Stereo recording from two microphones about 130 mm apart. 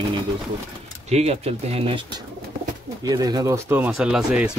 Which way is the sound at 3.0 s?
30° right (ahead or behind).